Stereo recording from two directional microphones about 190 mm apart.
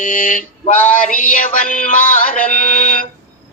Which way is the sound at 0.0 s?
45° left (ahead or behind).